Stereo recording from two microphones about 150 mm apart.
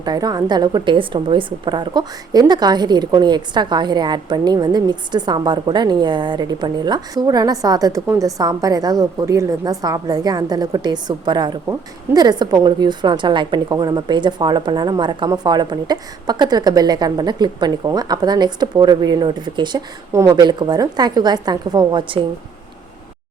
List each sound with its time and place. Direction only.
0.0 s a woman's voice: 25° right (ahead or behind)